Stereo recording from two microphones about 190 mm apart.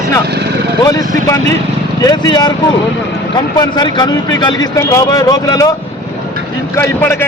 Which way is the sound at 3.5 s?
20° left (ahead or behind).